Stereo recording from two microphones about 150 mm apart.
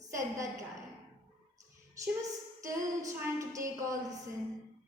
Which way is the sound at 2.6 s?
20° right (ahead or behind).